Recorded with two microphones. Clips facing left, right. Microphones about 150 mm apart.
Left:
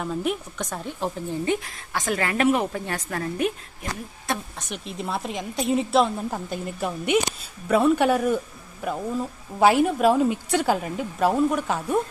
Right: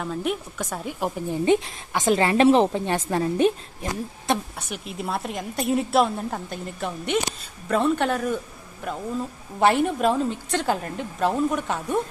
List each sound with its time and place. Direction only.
0.0 s a woman's voice: centre (ahead or behind); by 4.4 s 25° right (ahead or behind)
4.7 s a woman's voice: 5° right (ahead or behind)